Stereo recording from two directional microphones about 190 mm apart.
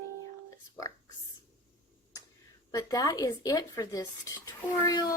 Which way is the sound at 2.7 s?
20° left (ahead or behind).